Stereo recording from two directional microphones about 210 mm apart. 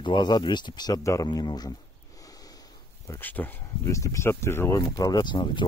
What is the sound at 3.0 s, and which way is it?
Speech, 10° left (ahead or behind).